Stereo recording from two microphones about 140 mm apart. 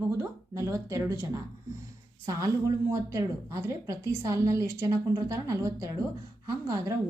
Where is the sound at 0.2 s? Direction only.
20° right (ahead or behind).